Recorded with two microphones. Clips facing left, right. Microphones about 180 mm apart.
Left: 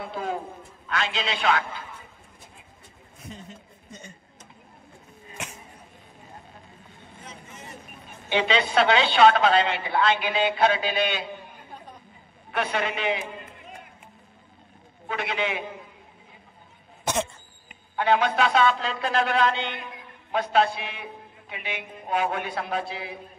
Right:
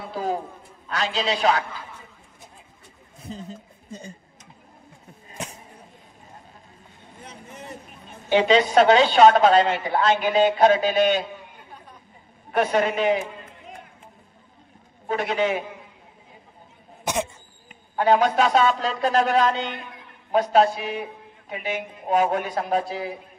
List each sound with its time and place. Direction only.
0.0 s a man's voice: 35° right (ahead or behind)
3.2 s a sound: 35° right (ahead or behind)
8.3 s a woman's voice: 40° right (ahead or behind)
12.4 s a man's voice: 40° right (ahead or behind)
15.0 s a man's voice: 40° right (ahead or behind)
17.0 s cough: 15° right (ahead or behind)
17.9 s a man's voice: 40° right (ahead or behind)